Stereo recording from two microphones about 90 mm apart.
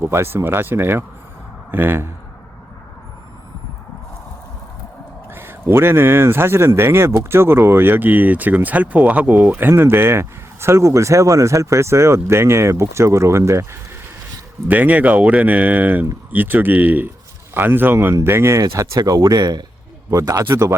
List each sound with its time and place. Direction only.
0.0 s speech: 30° right (ahead or behind)
5.3 s speech: 25° right (ahead or behind)
14.7 s speech: 20° right (ahead or behind)
18.9 s speech: 40° right (ahead or behind)
20.1 s speech: 40° right (ahead or behind)